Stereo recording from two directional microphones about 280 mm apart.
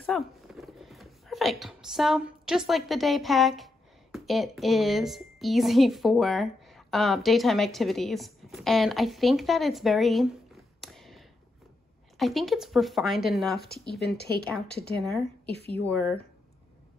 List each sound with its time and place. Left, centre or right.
0.0 s speech: centre
14.1 s speech: left
15.0 s speech: centre